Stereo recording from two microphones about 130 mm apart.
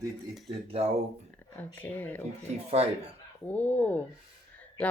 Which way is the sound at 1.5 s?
15° left (ahead or behind).